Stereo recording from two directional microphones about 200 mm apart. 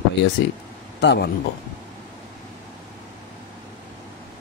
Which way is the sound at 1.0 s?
60° left (ahead or behind).